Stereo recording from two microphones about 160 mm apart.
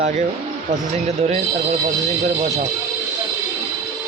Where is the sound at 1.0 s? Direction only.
45° right (ahead or behind).